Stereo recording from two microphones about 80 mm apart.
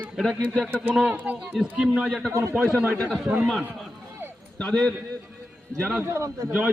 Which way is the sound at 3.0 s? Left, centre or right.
Centre.